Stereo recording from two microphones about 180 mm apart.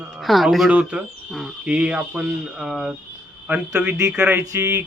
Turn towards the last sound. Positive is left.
turn(degrees=-15)  # may be behind; listen again after turning